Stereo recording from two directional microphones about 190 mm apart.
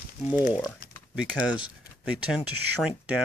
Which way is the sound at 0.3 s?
10° right (ahead or behind).